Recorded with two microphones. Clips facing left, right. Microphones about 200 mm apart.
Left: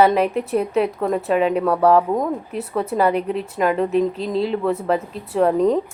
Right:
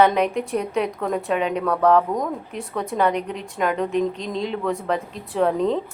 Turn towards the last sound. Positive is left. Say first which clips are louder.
# left 4 dB
turn(degrees=5)  # may be behind; listen again after turning